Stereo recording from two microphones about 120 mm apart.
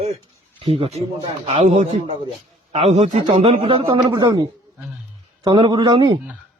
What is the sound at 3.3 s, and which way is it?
A man's voice, 55° right (ahead or behind).